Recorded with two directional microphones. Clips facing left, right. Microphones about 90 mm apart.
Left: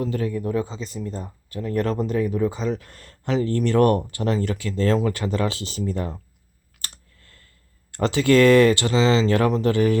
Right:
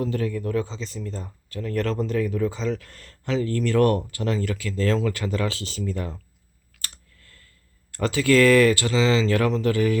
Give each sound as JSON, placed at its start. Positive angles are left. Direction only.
{"t": 0.0, "sound": "speech", "side_deg": 15}
{"t": 6.8, "sound": "clicking", "side_deg": 25}
{"t": 7.9, "sound": "speech", "side_deg": 30}